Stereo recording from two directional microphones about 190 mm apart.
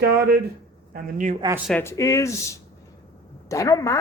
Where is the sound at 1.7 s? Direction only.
10° left (ahead or behind).